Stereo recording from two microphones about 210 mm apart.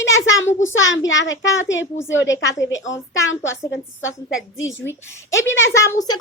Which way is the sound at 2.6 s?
15° left (ahead or behind).